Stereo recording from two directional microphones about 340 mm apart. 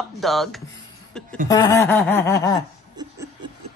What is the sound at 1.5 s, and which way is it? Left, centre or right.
Snicker, centre.